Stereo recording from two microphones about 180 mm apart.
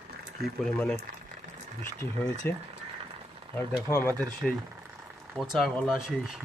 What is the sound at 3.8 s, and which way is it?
Speech, 15° left (ahead or behind).